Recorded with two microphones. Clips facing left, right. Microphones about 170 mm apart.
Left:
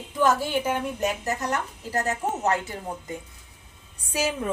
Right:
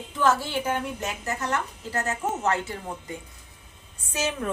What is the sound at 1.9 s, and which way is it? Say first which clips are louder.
Speech: left 2 dB; 40° left (ahead or behind).